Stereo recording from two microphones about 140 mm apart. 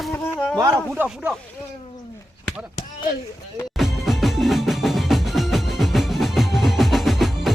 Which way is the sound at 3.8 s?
Centre (ahead or behind).